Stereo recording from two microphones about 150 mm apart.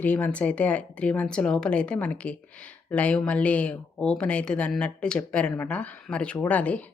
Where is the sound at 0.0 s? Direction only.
10° left (ahead or behind).